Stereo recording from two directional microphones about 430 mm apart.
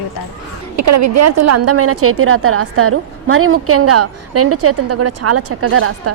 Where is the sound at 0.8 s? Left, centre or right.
Right.